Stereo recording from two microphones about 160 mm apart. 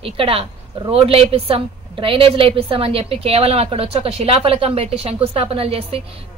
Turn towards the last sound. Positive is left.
turn(degrees=-40)  # may be behind; listen again after turning